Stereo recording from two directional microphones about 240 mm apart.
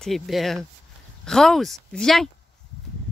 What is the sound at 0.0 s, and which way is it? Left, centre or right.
Speech, centre.